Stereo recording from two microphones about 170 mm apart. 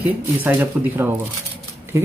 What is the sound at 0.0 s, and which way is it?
A woman's voice, 10° right (ahead or behind).